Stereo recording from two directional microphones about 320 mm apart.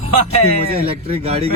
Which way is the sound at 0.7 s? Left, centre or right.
Centre.